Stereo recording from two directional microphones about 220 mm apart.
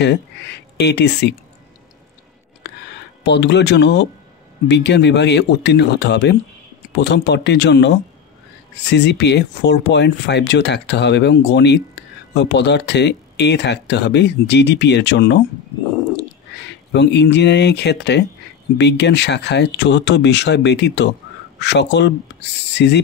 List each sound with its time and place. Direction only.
0.0 s speech: 50° left (ahead or behind)
3.3 s speech: 50° left (ahead or behind)
16.6 s speech: 50° left (ahead or behind)